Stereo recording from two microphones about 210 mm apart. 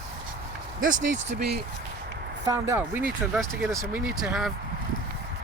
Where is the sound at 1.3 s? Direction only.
50° right (ahead or behind).